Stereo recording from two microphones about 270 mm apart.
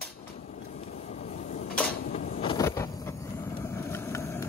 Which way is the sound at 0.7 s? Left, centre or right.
Left.